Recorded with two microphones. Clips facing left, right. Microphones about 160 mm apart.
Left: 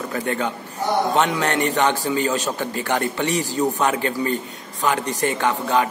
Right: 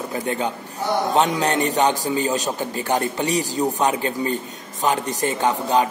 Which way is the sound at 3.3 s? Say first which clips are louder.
Even; 40° right (ahead or behind).